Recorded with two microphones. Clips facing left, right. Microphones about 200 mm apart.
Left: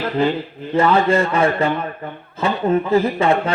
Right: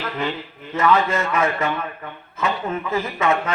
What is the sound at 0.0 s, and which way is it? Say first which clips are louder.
Speech: left 8 dB; 30° left (ahead or behind).